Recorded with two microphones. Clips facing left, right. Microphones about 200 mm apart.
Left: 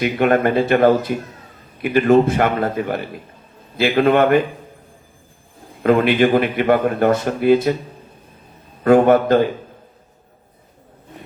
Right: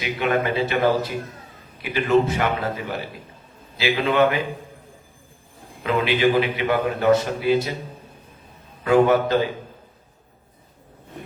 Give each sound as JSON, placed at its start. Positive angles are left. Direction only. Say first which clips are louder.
{"t": 0.0, "sound": "a man's voice", "louder": "left 7 dB", "side_deg": 55}
{"t": 5.8, "sound": "a man's voice", "louder": "left 6 dB", "side_deg": 50}
{"t": 8.8, "sound": "a man's voice", "louder": "left 5 dB", "side_deg": 50}